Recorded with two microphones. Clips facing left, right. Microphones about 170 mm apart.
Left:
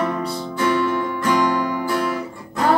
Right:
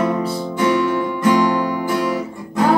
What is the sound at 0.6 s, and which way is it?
Music, 15° right (ahead or behind).